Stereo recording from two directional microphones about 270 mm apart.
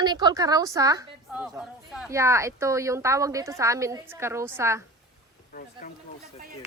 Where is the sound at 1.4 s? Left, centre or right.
Centre.